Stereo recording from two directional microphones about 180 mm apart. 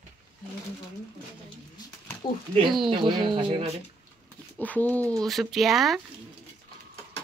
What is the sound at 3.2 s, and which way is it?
Speech, 30° right (ahead or behind).